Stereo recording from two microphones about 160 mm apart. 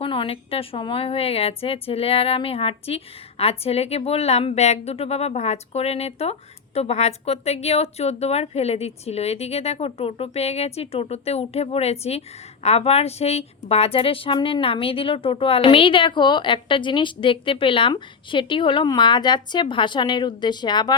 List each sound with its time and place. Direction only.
0.0 s a woman's voice: 35° left (ahead or behind)